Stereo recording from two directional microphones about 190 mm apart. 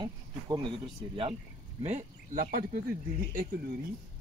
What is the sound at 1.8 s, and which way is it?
Speech, 35° right (ahead or behind).